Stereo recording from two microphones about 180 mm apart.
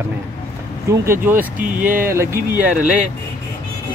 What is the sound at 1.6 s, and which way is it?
Speech, 50° right (ahead or behind).